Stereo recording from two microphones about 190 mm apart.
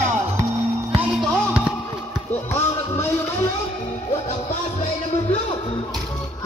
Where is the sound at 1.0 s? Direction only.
Centre (ahead or behind).